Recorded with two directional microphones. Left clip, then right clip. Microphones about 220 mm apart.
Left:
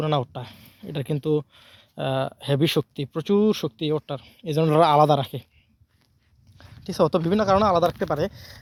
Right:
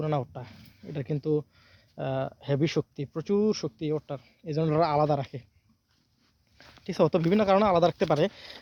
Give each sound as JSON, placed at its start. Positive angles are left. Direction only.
{"t": 0.0, "sound": "speech", "side_deg": 45}
{"t": 6.8, "sound": "speech", "side_deg": 15}